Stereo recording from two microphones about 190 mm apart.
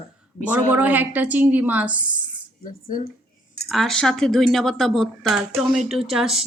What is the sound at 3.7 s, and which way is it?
Speech, centre (ahead or behind).